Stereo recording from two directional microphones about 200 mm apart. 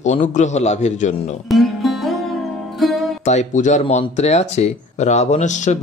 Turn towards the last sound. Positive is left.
turn(degrees=35)  # may be behind; listen again after turning